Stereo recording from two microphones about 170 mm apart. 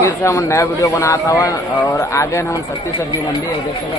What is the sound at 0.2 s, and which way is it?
A man's voice, 15° left (ahead or behind).